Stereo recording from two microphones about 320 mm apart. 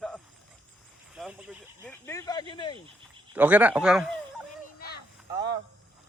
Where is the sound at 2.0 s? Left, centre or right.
Centre.